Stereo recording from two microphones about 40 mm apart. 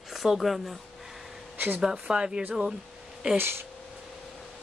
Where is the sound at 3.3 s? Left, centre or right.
Right.